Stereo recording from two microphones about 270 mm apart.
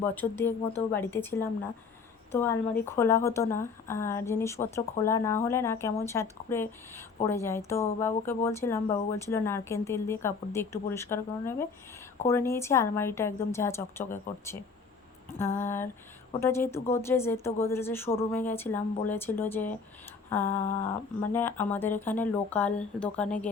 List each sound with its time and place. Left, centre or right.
0.1 s a woman's voice: centre